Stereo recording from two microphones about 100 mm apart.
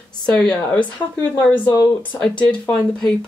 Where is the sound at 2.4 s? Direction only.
15° left (ahead or behind).